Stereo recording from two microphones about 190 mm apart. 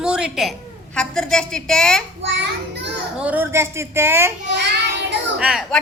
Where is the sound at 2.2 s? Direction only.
65° right (ahead or behind).